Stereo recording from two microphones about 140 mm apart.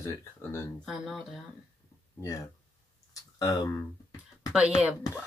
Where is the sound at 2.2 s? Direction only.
25° left (ahead or behind).